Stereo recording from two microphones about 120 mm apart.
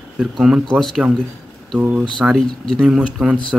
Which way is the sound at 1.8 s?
10° right (ahead or behind).